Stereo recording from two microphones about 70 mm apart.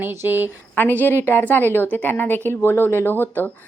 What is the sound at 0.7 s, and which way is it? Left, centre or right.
A woman's voice, left.